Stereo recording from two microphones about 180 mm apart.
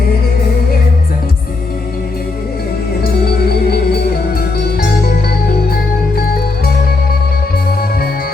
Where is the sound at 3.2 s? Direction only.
60° left (ahead or behind).